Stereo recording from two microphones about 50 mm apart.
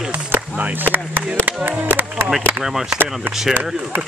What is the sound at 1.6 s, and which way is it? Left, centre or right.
Speech, right.